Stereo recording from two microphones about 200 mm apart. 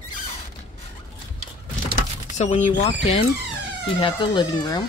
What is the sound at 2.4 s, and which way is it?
Speech, 35° left (ahead or behind).